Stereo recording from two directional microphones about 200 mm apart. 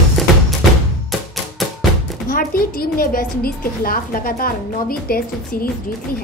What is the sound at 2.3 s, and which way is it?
A woman's voice, 45° left (ahead or behind).